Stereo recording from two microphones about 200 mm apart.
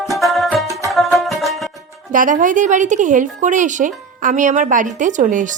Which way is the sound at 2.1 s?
40° right (ahead or behind).